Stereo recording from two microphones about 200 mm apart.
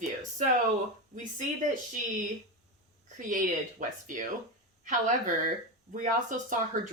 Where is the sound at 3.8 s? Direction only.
40° right (ahead or behind).